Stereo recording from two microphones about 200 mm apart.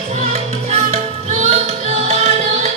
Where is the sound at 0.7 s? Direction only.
35° right (ahead or behind).